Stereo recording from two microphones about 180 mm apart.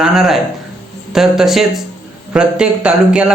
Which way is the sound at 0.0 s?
Centre (ahead or behind).